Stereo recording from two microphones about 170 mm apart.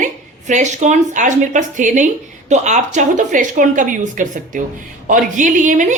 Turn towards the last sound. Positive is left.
turn(degrees=-45)  # may be behind; listen again after turning